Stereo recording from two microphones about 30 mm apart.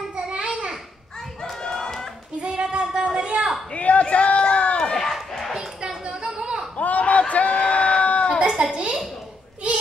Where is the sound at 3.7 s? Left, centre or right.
Left.